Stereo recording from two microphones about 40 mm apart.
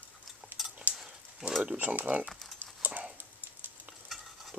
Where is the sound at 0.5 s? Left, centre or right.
Right.